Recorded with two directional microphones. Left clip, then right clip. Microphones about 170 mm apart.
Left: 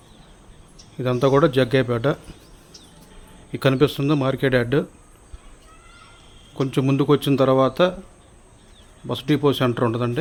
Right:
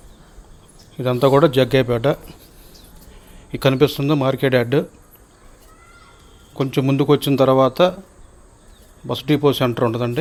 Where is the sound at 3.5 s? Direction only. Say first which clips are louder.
Right 3 dB; 5° left (ahead or behind).